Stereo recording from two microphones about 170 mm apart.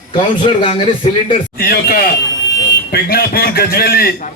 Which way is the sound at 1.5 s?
65° left (ahead or behind).